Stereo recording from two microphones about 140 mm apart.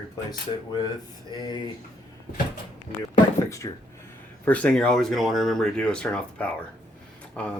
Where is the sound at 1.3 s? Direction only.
30° left (ahead or behind).